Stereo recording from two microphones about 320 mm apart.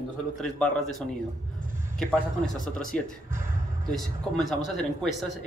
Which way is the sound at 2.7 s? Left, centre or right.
Centre.